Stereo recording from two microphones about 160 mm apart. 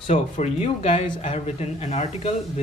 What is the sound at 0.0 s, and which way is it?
A man's voice, 40° left (ahead or behind).